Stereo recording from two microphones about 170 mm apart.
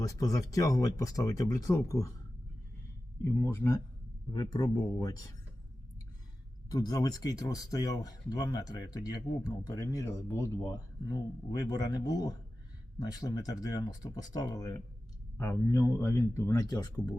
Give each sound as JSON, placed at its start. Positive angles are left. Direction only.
{"t": 0.0, "sound": "speech", "side_deg": 20}
{"t": 3.4, "sound": "speech", "side_deg": 15}
{"t": 6.7, "sound": "speech", "side_deg": 20}